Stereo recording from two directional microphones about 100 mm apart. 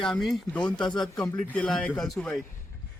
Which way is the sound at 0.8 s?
50° left (ahead or behind).